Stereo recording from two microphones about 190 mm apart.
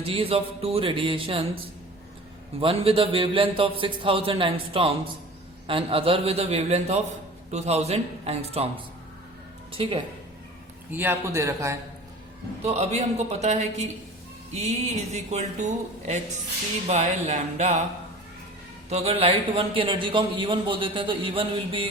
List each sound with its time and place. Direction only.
0.0 s a man's voice: 30° right (ahead or behind)
2.6 s a man's voice: 30° right (ahead or behind)
9.7 s a man's voice: 30° right (ahead or behind)
10.9 s a man's voice: 15° right (ahead or behind)
12.6 s speech: 35° right (ahead or behind)
18.9 s a man's voice: 30° right (ahead or behind)